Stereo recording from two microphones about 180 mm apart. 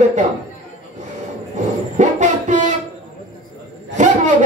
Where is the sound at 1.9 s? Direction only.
40° right (ahead or behind).